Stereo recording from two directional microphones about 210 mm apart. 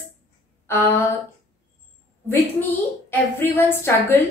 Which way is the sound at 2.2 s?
10° left (ahead or behind).